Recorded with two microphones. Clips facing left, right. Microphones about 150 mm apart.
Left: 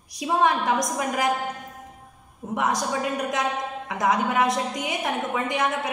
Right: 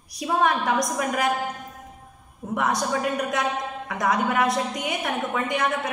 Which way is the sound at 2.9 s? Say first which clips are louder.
Right 1 dB; 20° left (ahead or behind).